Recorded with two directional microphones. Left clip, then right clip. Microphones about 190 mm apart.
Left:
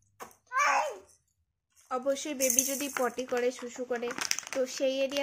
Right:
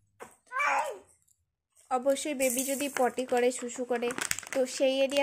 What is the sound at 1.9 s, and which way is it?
Speech, 20° right (ahead or behind).